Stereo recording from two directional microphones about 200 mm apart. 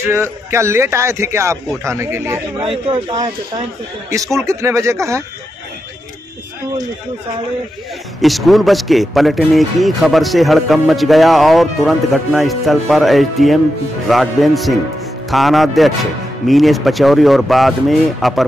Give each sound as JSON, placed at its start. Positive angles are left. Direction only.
{"t": 0.1, "sound": "a man's voice", "side_deg": -15}
{"t": 2.6, "sound": "speech", "side_deg": -25}
{"t": 4.4, "sound": "a man's voice", "side_deg": -15}
{"t": 8.2, "sound": "a man's voice", "side_deg": 0}